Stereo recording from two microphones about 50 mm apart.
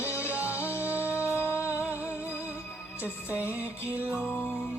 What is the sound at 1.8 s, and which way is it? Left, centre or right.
Music, right.